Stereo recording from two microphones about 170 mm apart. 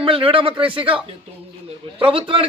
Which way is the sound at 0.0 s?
30° right (ahead or behind).